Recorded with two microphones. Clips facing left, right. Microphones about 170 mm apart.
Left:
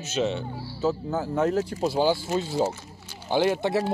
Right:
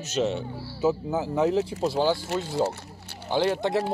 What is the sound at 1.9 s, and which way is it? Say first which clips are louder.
Speech: left 3 dB; 5° left (ahead or behind).